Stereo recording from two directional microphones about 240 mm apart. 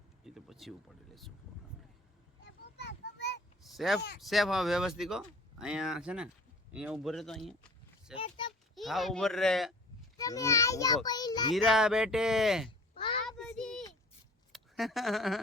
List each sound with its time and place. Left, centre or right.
0.3 s speech: centre
2.4 s a sound: left
3.6 s a sound: centre
4.2 s speech: centre
8.2 s a sound: centre
8.7 s speech: centre
10.2 s a child's voice: centre
11.5 s speech: centre
13.2 s child singing: centre
14.5 s speech: centre